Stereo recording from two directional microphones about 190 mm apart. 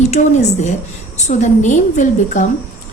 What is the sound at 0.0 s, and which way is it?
A woman's voice, 35° left (ahead or behind).